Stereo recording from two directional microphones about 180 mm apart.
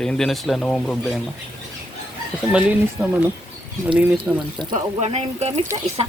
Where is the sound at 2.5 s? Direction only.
10° right (ahead or behind).